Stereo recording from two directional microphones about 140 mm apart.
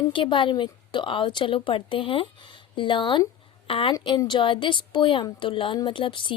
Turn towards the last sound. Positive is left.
turn(degrees=35)  # may be behind; listen again after turning